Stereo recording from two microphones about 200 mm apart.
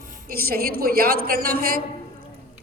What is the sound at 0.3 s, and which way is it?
A woman's voice, 50° right (ahead or behind).